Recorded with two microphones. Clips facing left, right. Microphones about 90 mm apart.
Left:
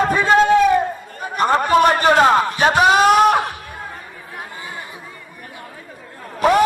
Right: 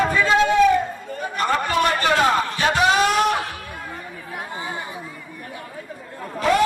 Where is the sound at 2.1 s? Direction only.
40° left (ahead or behind).